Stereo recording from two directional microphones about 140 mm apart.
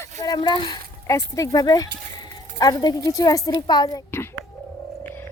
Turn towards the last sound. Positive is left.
turn(degrees=30)  # may be behind; listen again after turning